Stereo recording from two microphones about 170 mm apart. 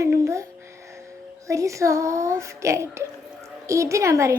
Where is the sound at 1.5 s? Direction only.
20° right (ahead or behind).